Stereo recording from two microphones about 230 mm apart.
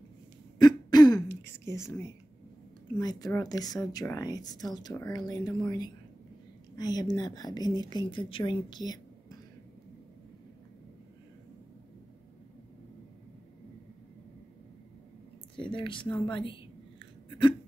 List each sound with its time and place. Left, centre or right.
0.6 s throat clearing: centre
1.4 s a woman's voice: centre
15.5 s speech: left